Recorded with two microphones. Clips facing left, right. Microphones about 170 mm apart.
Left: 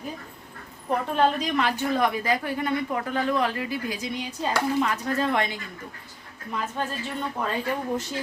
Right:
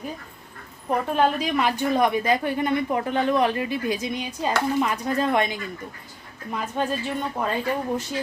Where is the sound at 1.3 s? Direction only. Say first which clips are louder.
Right 2 dB; 10° right (ahead or behind).